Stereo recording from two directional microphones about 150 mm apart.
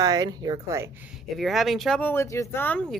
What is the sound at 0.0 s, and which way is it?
Speech, 25° right (ahead or behind).